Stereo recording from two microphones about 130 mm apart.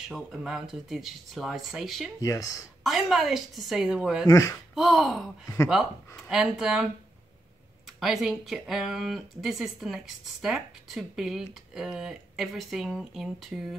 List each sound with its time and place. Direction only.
0.1 s speech: 5° right (ahead or behind)
2.2 s speech: 25° left (ahead or behind)
2.8 s speech: centre (ahead or behind)
4.3 s speech: 25° left (ahead or behind)
4.7 s speech: centre (ahead or behind)